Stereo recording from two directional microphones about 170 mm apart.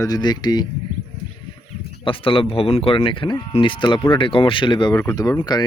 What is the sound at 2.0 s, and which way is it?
Speech, 30° left (ahead or behind).